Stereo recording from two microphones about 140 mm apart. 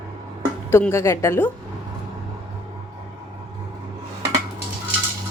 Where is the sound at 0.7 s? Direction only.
20° left (ahead or behind).